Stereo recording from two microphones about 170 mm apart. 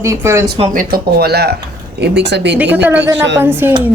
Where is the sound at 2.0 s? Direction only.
85° right.